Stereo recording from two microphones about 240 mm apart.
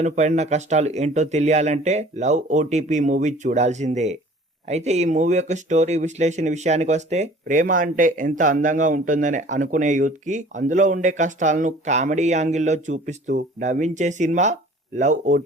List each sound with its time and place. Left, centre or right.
0.0 s speech: right